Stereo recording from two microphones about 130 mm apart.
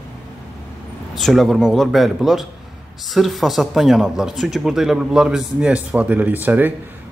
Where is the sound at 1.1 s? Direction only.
Centre (ahead or behind).